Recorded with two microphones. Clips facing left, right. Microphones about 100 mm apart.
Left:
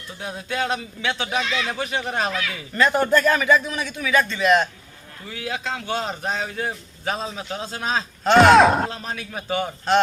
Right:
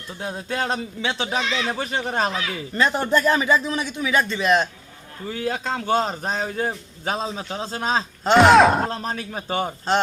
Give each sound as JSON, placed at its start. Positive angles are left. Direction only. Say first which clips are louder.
{"t": 0.2, "sound": "a man's voice", "louder": "even", "side_deg": -35}
{"t": 5.3, "sound": "a man's voice", "louder": "right 3 dB", "side_deg": -40}
{"t": 8.4, "sound": "speech", "louder": "even", "side_deg": 0}
{"t": 8.9, "sound": "a man's voice", "louder": "right 3 dB", "side_deg": -40}